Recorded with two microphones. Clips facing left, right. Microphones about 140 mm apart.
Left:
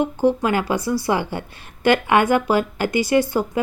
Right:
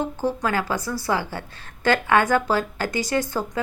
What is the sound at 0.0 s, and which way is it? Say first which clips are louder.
A woman's voice: left 6 dB; 20° left (ahead or behind).